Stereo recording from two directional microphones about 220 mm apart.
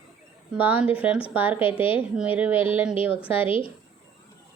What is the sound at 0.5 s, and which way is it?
A woman's voice, 5° right (ahead or behind).